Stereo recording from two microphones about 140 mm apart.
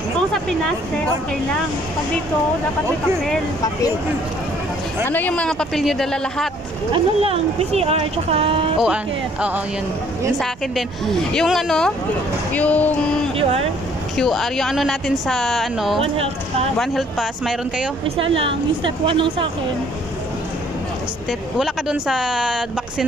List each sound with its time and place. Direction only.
0.3 s speech: 5° left (ahead or behind)
5.0 s a woman's voice: 10° left (ahead or behind)
6.9 s speech: 40° right (ahead or behind)
8.7 s speech: 5° right (ahead or behind)
11.1 s a woman's voice: centre (ahead or behind)
12.5 s a sound: 10° left (ahead or behind)
13.4 s speech: 45° right (ahead or behind)
14.1 s a woman's voice: centre (ahead or behind)
18.0 s a woman's voice: 40° right (ahead or behind)
21.3 s a woman's voice: 5° right (ahead or behind)